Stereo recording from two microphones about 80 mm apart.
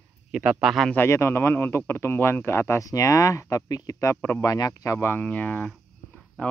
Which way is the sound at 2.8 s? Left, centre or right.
Left.